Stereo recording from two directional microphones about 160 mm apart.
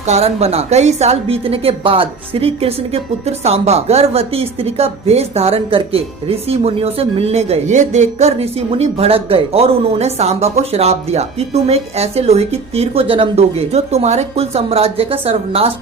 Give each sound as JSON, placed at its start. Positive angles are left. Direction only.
{"t": 0.0, "sound": "a woman's voice", "side_deg": -45}